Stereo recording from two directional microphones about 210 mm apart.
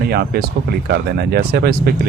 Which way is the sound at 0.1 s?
50° right (ahead or behind).